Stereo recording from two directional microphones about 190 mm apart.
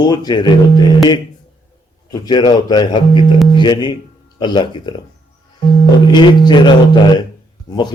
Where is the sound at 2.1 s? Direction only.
20° left (ahead or behind).